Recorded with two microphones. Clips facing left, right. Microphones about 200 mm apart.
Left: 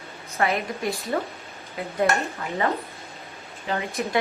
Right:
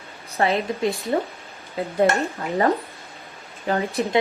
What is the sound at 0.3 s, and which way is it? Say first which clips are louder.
Speech: right 3 dB; 25° right (ahead or behind).